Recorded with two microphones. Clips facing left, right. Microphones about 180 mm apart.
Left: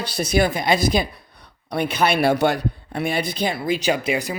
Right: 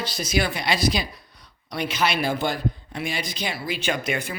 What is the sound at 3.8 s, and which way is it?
Speech, 35° left (ahead or behind).